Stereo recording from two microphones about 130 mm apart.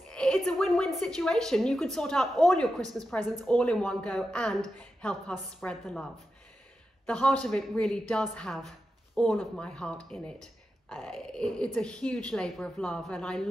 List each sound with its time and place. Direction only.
0.1 s a woman's voice: 5° left (ahead or behind)
2.8 s a woman's voice: 25° right (ahead or behind)
3.2 s speech: 10° left (ahead or behind)
7.1 s a woman's voice: 5° left (ahead or behind)